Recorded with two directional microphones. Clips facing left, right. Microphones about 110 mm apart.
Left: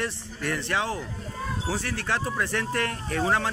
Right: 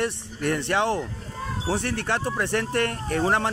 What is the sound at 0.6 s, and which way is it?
Speech, 65° right (ahead or behind).